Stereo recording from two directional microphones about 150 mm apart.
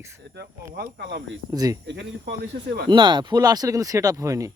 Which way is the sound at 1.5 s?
25° right (ahead or behind).